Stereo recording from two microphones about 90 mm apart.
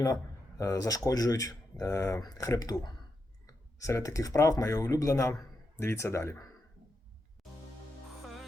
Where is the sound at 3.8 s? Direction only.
35° left (ahead or behind).